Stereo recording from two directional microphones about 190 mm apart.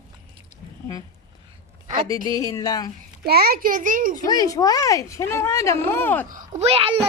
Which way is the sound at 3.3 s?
55° right (ahead or behind).